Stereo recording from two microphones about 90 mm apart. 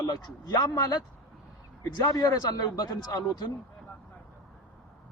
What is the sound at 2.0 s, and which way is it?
Speech, 45° left (ahead or behind).